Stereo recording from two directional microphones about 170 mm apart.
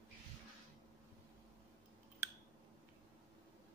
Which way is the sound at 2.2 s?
15° right (ahead or behind).